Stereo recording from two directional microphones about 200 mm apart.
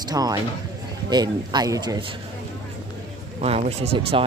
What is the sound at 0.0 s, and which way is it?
Speech, 20° right (ahead or behind).